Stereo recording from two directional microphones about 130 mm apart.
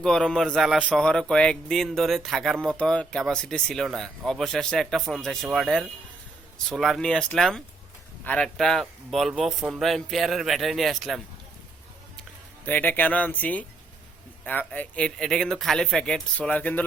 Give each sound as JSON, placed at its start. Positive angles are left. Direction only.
{"t": 0.0, "sound": "speech", "side_deg": 5}
{"t": 12.6, "sound": "speech", "side_deg": 15}